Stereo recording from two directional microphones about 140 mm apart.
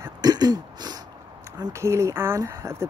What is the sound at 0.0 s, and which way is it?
Throat clearing, 25° right (ahead or behind).